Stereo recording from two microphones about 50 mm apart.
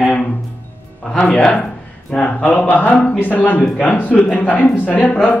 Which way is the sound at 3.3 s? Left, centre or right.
Left.